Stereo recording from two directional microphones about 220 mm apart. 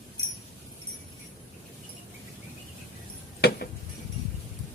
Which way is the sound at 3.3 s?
45° left (ahead or behind).